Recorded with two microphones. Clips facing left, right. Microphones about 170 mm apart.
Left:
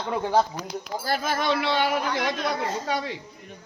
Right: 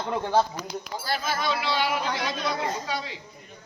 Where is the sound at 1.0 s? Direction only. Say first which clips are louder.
Left 3 dB; 50° left (ahead or behind).